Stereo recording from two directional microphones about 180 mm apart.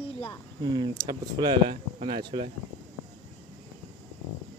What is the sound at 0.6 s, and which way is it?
Speech, 25° right (ahead or behind).